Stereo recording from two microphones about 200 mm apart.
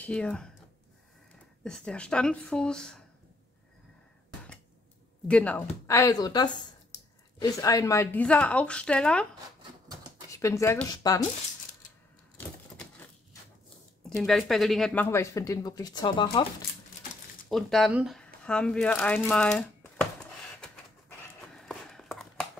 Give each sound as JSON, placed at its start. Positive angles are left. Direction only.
{"t": 0.0, "sound": "speech", "side_deg": 5}
{"t": 1.6, "sound": "speech", "side_deg": 5}
{"t": 5.3, "sound": "speech", "side_deg": 5}
{"t": 10.3, "sound": "speech", "side_deg": 15}
{"t": 14.0, "sound": "speech", "side_deg": 0}
{"t": 17.5, "sound": "speech", "side_deg": 0}
{"t": 21.5, "sound": "a sound", "side_deg": 0}